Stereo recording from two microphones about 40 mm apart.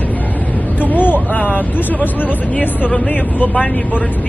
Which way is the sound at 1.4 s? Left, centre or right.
Left.